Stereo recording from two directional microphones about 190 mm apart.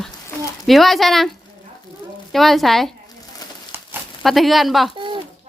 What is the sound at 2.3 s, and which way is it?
Speech, centre (ahead or behind).